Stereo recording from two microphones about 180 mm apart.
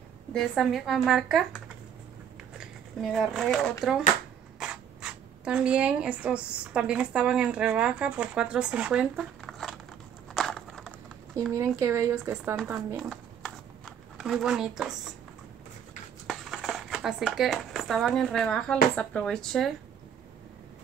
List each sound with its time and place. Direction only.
0.3 s speech: centre (ahead or behind)
2.6 s speech: centre (ahead or behind)
10.3 s a sound: centre (ahead or behind)
11.5 s speech: 15° right (ahead or behind)
12.7 s speech: centre (ahead or behind)
13.8 s zipper: centre (ahead or behind)
14.8 s speech: 5° right (ahead or behind)
16.3 s speech: centre (ahead or behind)